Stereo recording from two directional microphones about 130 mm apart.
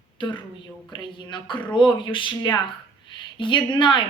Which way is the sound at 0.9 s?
35° left (ahead or behind).